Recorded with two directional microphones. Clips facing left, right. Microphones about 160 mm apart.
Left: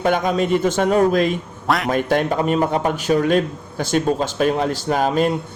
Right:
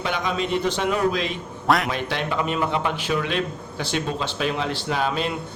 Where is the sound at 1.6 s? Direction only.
Centre (ahead or behind).